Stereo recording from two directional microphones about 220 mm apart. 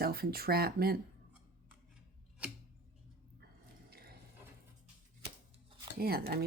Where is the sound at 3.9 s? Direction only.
45° right (ahead or behind).